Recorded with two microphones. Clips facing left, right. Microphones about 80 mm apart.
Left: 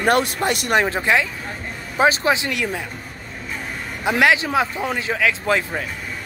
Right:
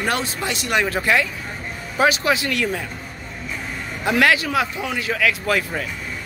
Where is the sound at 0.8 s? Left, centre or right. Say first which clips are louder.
Even; left.